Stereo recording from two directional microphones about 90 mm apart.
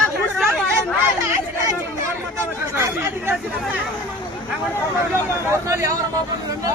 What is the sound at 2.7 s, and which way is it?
Speech, 25° right (ahead or behind).